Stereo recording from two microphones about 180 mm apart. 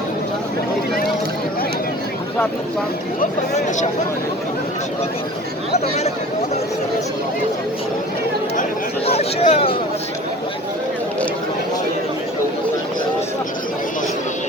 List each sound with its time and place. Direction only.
3.2 s speech: 40° left (ahead or behind)
9.0 s speech: 35° left (ahead or behind)